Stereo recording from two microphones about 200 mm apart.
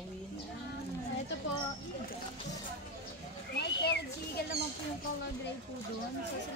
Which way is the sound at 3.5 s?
55° left (ahead or behind).